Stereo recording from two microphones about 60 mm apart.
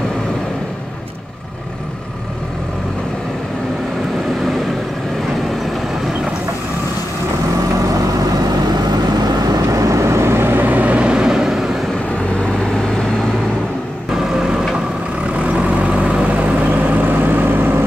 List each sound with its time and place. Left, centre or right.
7.8 s vehicle: right; by 11.8 s centre
12.5 s vehicle: centre
14.1 s vehicle: centre
15.7 s vehicle: right